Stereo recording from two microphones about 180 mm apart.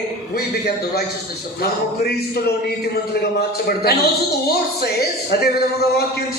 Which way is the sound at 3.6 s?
60° left (ahead or behind).